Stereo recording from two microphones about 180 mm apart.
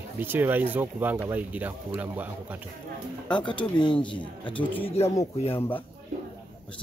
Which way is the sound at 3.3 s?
25° left (ahead or behind).